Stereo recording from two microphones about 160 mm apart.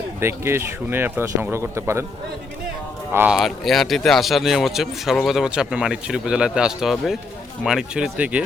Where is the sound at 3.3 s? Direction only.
Centre (ahead or behind).